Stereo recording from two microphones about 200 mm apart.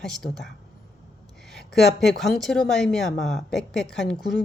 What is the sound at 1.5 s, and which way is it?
A woman's voice, centre (ahead or behind).